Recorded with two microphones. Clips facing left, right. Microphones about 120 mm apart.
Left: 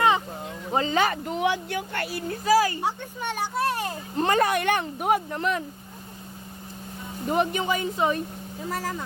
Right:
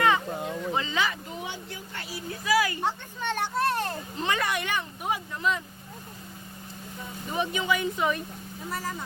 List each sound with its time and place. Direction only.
0.7 s speech: 40° left (ahead or behind); by 2.2 s 65° left (ahead or behind)
2.3 s speech: 40° left (ahead or behind)
2.8 s speech: 10° left (ahead or behind)
4.2 s speech: 45° left (ahead or behind)
7.3 s speech: 50° left (ahead or behind); by 8.2 s 35° left (ahead or behind)